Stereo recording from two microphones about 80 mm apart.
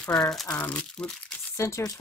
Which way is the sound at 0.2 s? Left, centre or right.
Centre.